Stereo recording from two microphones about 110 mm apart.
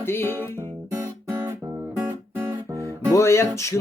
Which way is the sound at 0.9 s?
25° right (ahead or behind).